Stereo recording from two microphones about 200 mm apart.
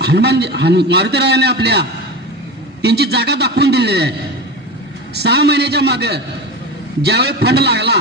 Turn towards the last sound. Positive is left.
turn(degrees=-55)  # may be behind; listen again after turning